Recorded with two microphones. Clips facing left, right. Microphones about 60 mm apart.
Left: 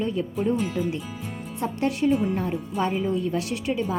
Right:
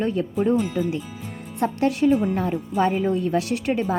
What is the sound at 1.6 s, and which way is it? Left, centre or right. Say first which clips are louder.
A woman's voice: right 4 dB; right.